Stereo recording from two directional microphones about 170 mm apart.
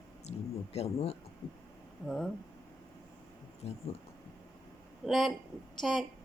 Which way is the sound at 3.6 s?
35° left (ahead or behind).